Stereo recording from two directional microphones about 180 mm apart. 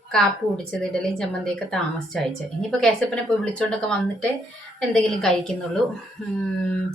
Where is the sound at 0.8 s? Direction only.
5° left (ahead or behind).